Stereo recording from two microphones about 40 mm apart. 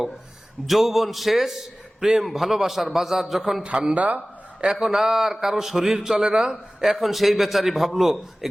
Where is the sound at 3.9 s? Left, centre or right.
Right.